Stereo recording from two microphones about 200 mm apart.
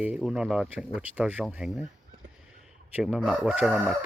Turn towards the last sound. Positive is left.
turn(degrees=-5)  # may be behind; listen again after turning